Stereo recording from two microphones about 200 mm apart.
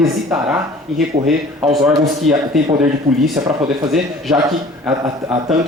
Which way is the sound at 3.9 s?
Centre (ahead or behind).